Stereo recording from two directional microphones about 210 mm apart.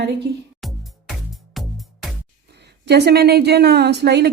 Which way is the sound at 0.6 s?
Centre (ahead or behind).